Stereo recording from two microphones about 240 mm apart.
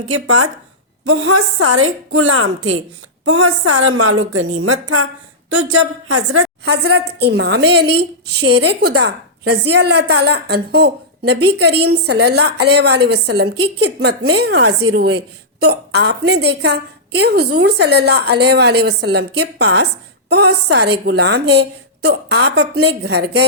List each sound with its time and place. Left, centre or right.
0.1 s a woman's voice: right
6.7 s a woman's voice: right